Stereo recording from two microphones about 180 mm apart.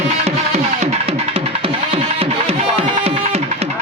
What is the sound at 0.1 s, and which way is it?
Music, 35° right (ahead or behind).